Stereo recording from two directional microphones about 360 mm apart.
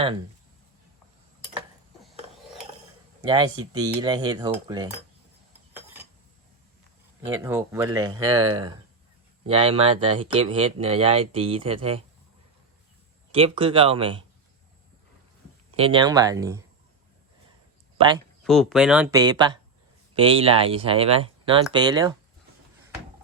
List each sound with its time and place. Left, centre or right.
3.2 s speech: centre
7.3 s speech: centre
9.5 s speech: centre
13.3 s speech: centre
15.7 s speech: centre
17.9 s a sound: centre
18.4 s speech: centre